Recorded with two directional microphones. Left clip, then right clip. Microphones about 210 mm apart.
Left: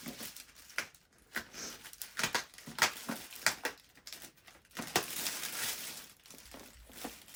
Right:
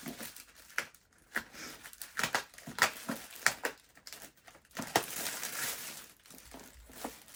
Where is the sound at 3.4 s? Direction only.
10° right (ahead or behind).